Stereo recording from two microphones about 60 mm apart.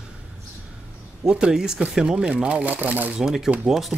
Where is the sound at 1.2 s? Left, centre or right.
Centre; by 3.2 s right.